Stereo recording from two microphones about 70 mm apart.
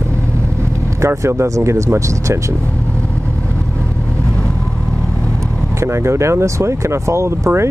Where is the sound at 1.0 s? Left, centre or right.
Right.